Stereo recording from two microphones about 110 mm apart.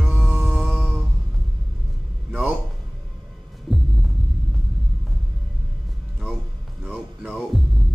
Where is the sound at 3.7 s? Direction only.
Centre (ahead or behind).